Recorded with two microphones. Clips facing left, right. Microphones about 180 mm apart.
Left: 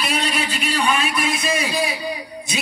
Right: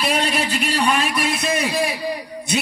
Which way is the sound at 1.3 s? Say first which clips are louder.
Right 1 dB; 60° right (ahead or behind).